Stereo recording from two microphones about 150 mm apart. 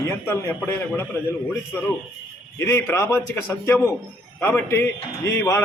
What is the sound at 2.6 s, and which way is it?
Speech, 20° left (ahead or behind).